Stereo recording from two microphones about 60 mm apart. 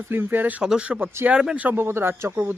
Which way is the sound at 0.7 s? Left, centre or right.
Centre.